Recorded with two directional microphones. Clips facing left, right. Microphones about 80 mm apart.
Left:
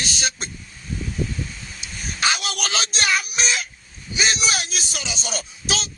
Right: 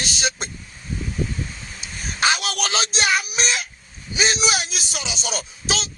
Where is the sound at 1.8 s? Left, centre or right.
Right.